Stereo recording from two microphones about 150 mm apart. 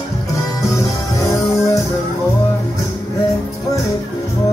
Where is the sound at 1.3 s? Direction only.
20° left (ahead or behind).